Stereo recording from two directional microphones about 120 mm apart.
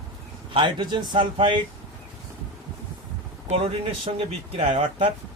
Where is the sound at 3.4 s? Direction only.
55° right (ahead or behind).